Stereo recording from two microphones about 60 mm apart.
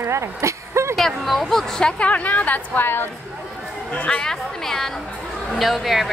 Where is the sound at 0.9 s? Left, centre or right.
Centre; by 3.1 s left.